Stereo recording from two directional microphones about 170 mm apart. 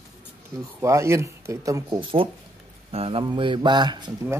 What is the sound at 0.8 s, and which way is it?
Speech, 15° right (ahead or behind).